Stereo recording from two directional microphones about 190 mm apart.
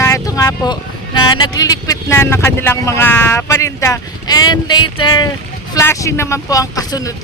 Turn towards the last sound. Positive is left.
turn(degrees=15)  # may be behind; listen again after turning